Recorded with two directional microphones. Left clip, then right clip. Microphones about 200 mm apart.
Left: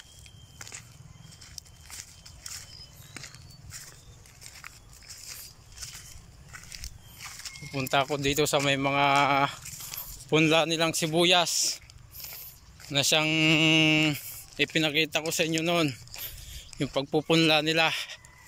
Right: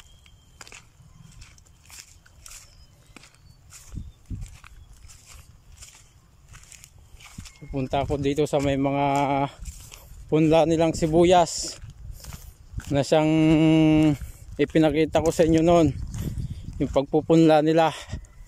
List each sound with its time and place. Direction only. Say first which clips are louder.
0.6 s walk: even; centre (ahead or behind)
7.2 s walk: left 5 dB; 5° right (ahead or behind)
7.7 s speech: right 1 dB; 25° right (ahead or behind)
12.9 s speech: right 4 dB; 35° right (ahead or behind)